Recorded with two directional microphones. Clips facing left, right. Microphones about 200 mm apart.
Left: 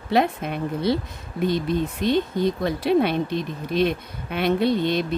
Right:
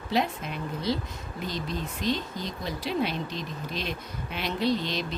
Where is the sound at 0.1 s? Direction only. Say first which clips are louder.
Left 7 dB; 60° left (ahead or behind).